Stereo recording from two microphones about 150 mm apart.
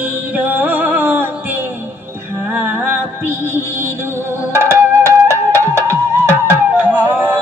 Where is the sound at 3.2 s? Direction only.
15° right (ahead or behind).